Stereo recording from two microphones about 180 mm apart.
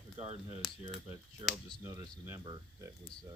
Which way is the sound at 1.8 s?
15° right (ahead or behind).